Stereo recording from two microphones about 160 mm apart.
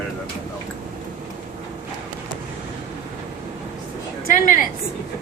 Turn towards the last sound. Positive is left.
turn(degrees=55)  # may be behind; listen again after turning